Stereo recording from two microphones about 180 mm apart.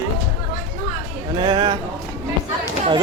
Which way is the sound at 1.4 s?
25° right (ahead or behind).